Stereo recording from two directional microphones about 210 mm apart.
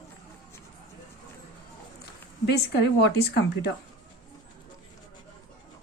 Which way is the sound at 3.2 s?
50° left (ahead or behind).